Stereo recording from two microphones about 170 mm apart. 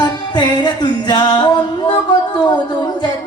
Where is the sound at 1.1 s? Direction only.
25° left (ahead or behind).